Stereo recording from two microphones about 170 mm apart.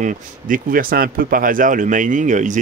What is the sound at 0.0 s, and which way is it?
Speech, 55° right (ahead or behind).